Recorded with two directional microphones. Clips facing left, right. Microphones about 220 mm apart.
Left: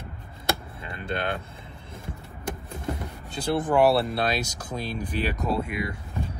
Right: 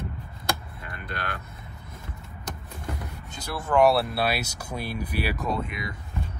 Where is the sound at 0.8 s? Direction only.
25° left (ahead or behind).